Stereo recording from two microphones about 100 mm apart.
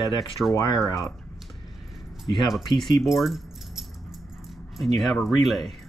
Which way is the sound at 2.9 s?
Centre (ahead or behind).